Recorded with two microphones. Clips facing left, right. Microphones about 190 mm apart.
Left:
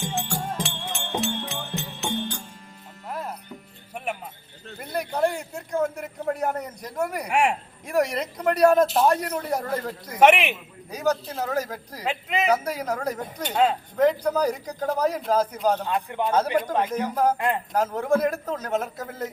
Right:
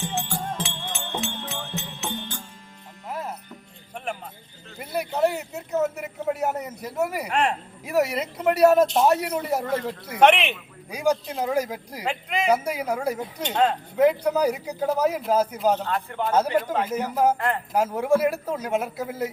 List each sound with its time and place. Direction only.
0.1 s music: centre (ahead or behind)
3.9 s music: 5° left (ahead or behind)
4.8 s a man's voice: 5° right (ahead or behind)
7.3 s a man's voice: 10° left (ahead or behind)
7.9 s a man's voice: 5° right (ahead or behind)
10.2 s a man's voice: 10° left (ahead or behind)
10.9 s a man's voice: 10° right (ahead or behind)
12.0 s speech: centre (ahead or behind)
12.5 s a man's voice: 10° right (ahead or behind)
13.4 s a man's voice: 10° left (ahead or behind)
13.9 s a man's voice: 10° right (ahead or behind)
15.8 s a man's voice: 15° left (ahead or behind)
16.9 s a man's voice: 5° right (ahead or behind)